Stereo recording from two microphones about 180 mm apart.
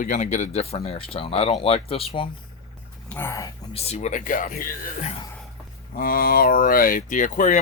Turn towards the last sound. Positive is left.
turn(degrees=45)  # may be behind; listen again after turning